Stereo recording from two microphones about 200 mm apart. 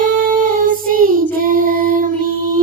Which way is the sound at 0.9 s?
45° right (ahead or behind).